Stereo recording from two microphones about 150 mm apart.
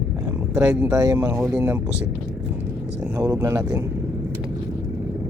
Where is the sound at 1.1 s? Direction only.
20° right (ahead or behind).